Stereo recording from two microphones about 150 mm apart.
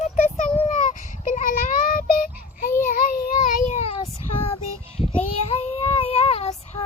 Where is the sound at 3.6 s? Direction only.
50° left (ahead or behind).